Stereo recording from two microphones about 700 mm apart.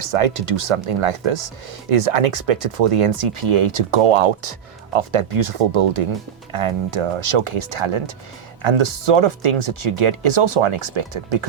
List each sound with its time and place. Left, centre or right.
0.0 s speech: right